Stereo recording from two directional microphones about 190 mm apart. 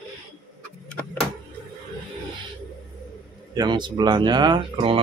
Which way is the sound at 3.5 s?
20° right (ahead or behind).